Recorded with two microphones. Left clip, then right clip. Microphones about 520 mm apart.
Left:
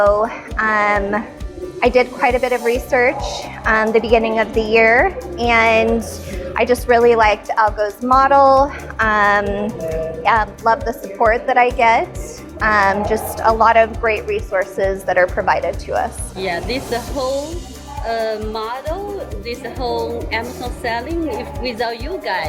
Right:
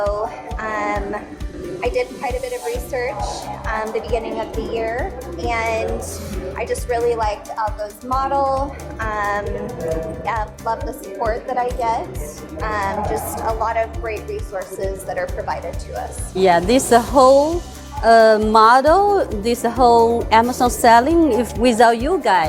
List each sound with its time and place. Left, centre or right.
0.1 s a woman's voice: left
16.4 s speech: right